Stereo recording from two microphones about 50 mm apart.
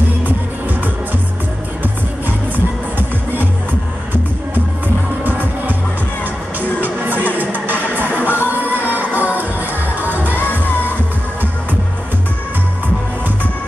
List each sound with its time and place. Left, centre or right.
1.8 s music: right
6.6 s music: right
8.1 s music: left
8.6 s music: right
10.3 s music: left